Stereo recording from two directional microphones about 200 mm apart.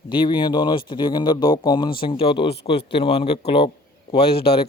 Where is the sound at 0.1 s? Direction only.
25° left (ahead or behind).